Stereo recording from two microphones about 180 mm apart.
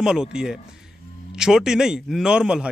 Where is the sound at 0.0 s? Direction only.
5° right (ahead or behind).